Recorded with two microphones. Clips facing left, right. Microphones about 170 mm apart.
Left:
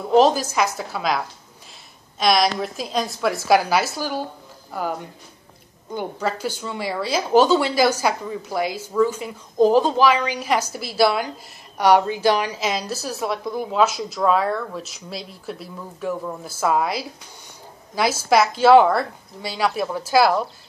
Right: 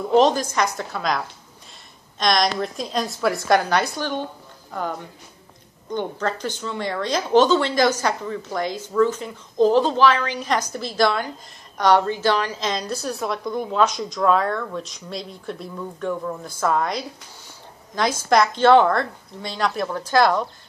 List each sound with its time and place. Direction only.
0.1 s a woman's voice: 5° left (ahead or behind)